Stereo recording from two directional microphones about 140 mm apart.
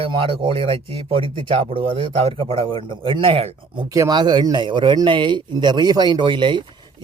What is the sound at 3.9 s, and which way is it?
A man's voice, 30° right (ahead or behind).